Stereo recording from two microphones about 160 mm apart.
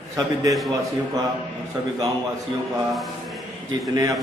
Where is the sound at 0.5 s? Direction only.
Centre (ahead or behind).